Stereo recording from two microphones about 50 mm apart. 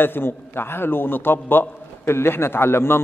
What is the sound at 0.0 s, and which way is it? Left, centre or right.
A man's voice, left.